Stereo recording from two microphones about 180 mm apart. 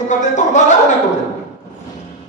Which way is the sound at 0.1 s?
45° left (ahead or behind).